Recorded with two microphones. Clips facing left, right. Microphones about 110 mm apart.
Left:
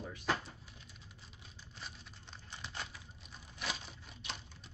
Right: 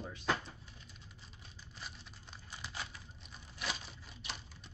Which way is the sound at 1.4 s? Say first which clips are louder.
Even; centre (ahead or behind).